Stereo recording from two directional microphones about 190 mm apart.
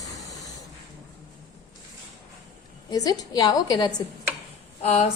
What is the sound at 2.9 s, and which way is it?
A woman's voice, 20° left (ahead or behind).